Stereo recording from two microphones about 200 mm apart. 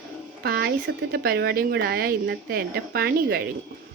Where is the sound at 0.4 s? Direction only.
50° right (ahead or behind).